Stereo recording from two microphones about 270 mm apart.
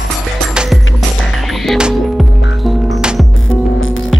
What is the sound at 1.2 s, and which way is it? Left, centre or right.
Music, centre.